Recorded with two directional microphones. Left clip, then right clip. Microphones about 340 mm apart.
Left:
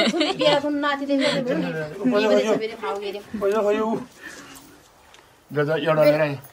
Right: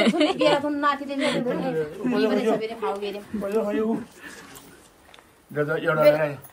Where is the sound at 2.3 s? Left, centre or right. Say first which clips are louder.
Left 4 dB; centre.